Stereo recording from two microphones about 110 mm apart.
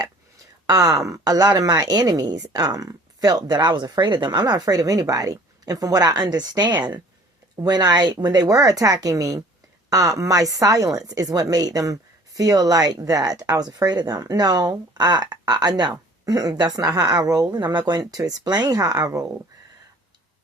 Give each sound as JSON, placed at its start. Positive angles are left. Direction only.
{"t": 0.7, "sound": "speech", "side_deg": -30}